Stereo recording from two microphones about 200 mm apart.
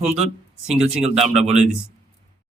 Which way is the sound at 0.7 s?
30° right (ahead or behind).